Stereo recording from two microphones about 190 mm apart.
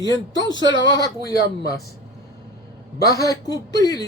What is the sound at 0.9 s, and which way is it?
Speech, 20° left (ahead or behind).